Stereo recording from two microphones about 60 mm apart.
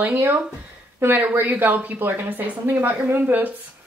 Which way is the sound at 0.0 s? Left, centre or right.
Right.